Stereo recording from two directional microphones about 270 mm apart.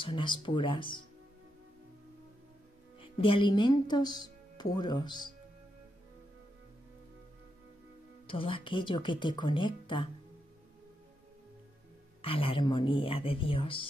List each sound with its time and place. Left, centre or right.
0.0 s speech: centre
3.0 s speech: centre
8.3 s speech: centre
12.2 s speech: centre